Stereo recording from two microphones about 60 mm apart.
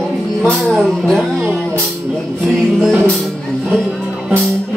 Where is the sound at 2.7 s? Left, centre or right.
Centre.